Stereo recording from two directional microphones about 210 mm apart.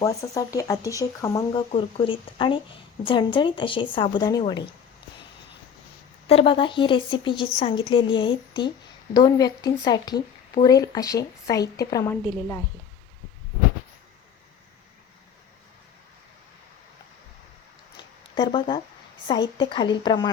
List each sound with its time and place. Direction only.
0.2 s a woman's voice: 15° left (ahead or behind)
6.2 s a woman's voice: 25° left (ahead or behind)
18.3 s a woman's voice: 25° left (ahead or behind)